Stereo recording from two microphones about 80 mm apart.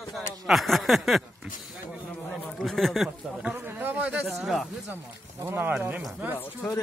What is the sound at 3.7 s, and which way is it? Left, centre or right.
Speech, right.